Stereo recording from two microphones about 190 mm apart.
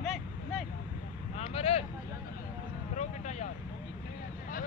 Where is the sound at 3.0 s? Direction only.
40° left (ahead or behind).